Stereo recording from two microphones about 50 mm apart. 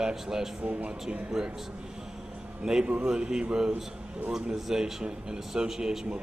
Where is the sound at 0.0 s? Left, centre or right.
Centre.